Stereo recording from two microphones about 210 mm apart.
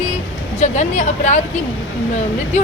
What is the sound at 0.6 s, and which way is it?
Speech, 35° left (ahead or behind).